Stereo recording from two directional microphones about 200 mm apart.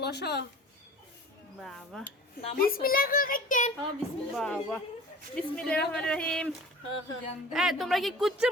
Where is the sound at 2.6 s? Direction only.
45° left (ahead or behind).